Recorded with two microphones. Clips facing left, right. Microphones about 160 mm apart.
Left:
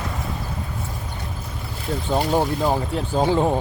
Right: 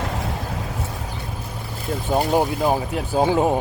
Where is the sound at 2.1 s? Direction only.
10° right (ahead or behind).